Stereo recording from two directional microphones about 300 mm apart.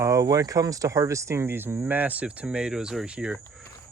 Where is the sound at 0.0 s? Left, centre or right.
Centre.